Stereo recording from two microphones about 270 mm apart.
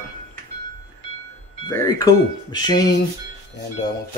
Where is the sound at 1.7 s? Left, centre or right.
Centre.